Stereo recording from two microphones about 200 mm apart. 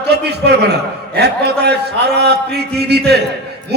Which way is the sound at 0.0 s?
55° right (ahead or behind).